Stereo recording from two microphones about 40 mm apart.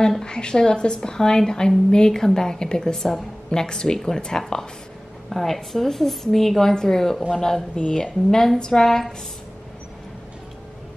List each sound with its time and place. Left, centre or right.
0.2 s a woman's voice: left